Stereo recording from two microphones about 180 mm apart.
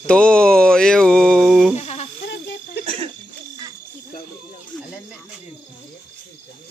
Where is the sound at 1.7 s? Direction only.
35° left (ahead or behind).